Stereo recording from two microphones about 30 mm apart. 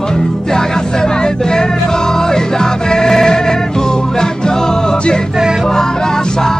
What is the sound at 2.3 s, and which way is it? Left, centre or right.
Music, left.